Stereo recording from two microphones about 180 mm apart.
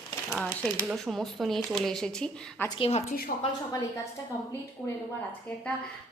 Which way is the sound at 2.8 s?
35° left (ahead or behind).